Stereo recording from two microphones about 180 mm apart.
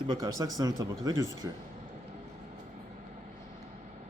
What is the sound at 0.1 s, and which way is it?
Speech, 20° right (ahead or behind).